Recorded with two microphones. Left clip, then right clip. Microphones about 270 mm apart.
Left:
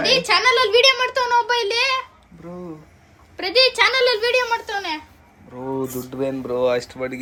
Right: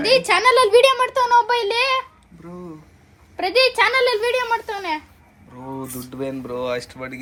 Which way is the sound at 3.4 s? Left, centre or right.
Right.